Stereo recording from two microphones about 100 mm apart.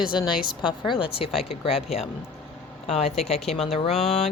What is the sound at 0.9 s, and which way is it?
Speech, 60° left (ahead or behind).